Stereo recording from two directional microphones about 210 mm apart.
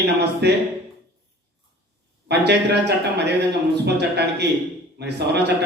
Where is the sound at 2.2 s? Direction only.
55° right (ahead or behind).